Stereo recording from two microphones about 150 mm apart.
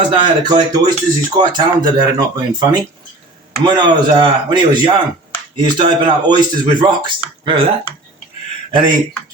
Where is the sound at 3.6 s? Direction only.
30° right (ahead or behind).